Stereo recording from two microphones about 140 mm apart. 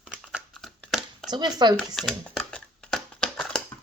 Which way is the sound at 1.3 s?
30° right (ahead or behind).